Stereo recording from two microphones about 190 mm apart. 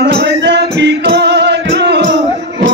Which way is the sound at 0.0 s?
65° right (ahead or behind).